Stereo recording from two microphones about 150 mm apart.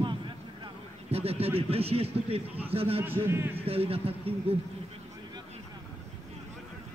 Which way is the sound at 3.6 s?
40° right (ahead or behind).